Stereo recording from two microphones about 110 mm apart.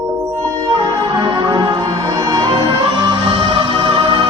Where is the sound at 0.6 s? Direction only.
45° right (ahead or behind).